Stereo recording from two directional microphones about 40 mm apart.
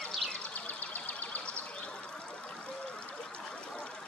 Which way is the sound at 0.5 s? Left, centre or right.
Left.